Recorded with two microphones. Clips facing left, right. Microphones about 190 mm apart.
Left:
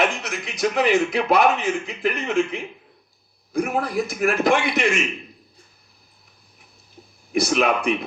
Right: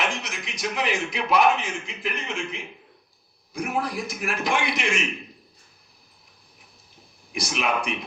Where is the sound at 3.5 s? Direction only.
55° left (ahead or behind).